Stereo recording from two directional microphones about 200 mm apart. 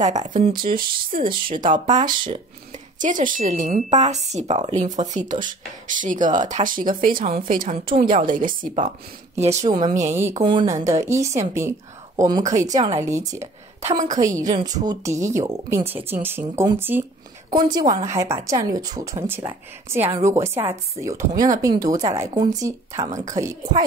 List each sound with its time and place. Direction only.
0.0 s speech: 35° right (ahead or behind)
3.0 s speech: 40° right (ahead or behind)
10.1 s speech: 10° right (ahead or behind)
10.4 s speech: 20° right (ahead or behind)
13.8 s speech: 40° right (ahead or behind)
14.5 s speech: 20° right (ahead or behind)